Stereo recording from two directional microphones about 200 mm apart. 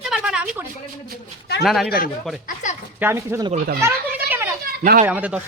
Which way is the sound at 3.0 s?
10° right (ahead or behind).